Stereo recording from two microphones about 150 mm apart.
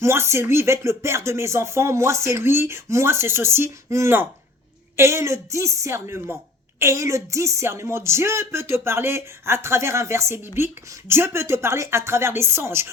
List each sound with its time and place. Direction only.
0.0 s a woman's voice: 15° right (ahead or behind)